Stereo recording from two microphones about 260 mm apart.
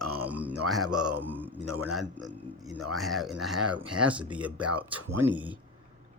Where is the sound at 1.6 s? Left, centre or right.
Right.